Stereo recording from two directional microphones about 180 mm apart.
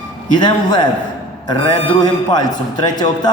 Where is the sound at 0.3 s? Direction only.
25° left (ahead or behind).